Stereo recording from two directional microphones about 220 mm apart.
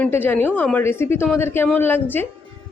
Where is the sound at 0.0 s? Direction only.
10° left (ahead or behind).